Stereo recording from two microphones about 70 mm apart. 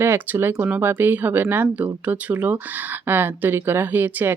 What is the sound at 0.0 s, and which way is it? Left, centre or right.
Speech, right.